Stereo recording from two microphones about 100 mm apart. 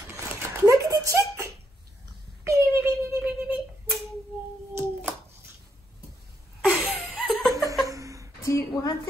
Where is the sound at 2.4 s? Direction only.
25° right (ahead or behind).